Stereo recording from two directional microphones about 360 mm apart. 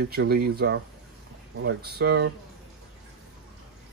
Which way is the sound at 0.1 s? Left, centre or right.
Right.